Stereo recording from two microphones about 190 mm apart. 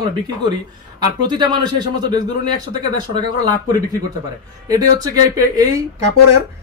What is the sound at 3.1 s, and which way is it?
Speech, 20° right (ahead or behind).